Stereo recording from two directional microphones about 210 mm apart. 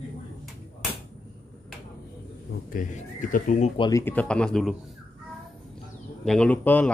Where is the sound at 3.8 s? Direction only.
15° left (ahead or behind).